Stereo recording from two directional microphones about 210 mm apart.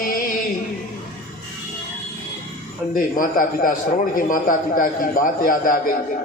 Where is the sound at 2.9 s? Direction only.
40° left (ahead or behind).